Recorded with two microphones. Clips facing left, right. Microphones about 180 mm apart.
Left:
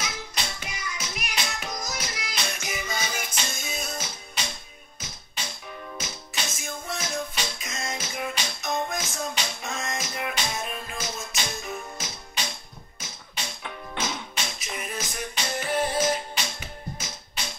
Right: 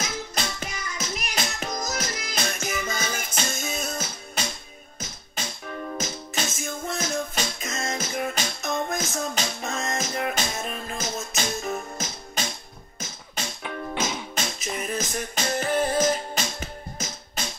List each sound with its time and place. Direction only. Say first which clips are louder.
0.0 s music: right 4 dB; 45° right (ahead or behind)
5.9 s music: right 7 dB; 45° right (ahead or behind)
14.3 s music: right 4 dB; 45° right (ahead or behind)